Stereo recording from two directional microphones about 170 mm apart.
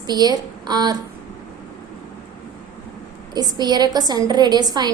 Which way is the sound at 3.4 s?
25° right (ahead or behind).